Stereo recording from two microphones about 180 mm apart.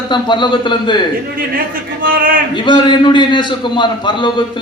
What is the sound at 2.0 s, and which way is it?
Speech, 50° right (ahead or behind).